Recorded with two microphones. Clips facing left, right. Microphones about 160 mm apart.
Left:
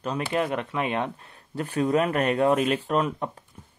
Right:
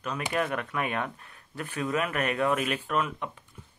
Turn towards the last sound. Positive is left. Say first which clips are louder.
# left 5 dB
turn(degrees=35)  # may be behind; listen again after turning